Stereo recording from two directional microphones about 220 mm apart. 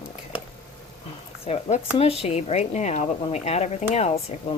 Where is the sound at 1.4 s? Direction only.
30° left (ahead or behind).